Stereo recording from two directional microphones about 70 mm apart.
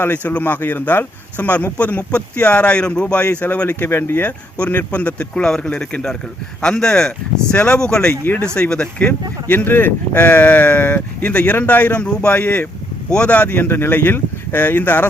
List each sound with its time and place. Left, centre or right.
0.0 s speech: left